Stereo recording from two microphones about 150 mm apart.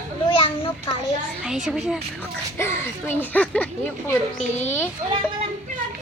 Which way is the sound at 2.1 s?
15° left (ahead or behind).